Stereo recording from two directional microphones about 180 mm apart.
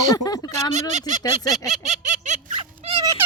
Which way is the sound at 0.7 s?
40° right (ahead or behind).